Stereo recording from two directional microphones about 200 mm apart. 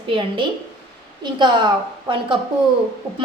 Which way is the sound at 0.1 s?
25° right (ahead or behind).